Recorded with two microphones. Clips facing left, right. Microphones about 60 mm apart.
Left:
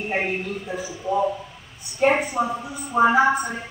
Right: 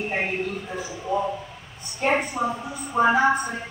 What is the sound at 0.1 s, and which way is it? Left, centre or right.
A woman's voice, centre.